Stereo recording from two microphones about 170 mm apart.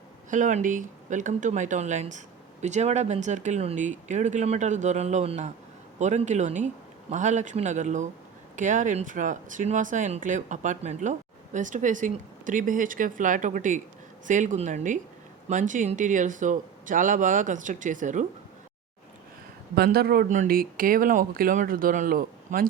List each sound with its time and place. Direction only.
0.3 s speech: 45° right (ahead or behind)
19.7 s speech: 65° right (ahead or behind)